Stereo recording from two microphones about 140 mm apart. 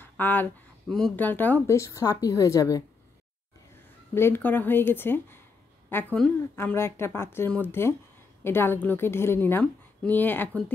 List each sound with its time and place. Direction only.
0.0 s a sound: 15° left (ahead or behind)
0.8 s a woman's voice: 5° left (ahead or behind); by 2.8 s 25° left (ahead or behind)
4.1 s a woman's voice: 15° left (ahead or behind)